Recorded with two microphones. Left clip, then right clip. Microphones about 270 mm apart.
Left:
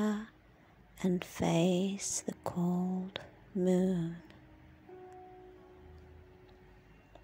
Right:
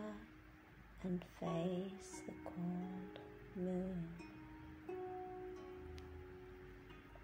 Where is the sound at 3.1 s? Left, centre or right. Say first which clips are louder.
Left 11 dB; left.